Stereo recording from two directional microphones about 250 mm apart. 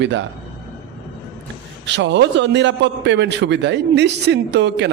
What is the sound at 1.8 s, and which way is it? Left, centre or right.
A man's voice, right.